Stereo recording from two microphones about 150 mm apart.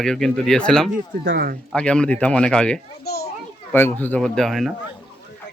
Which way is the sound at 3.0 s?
90° left.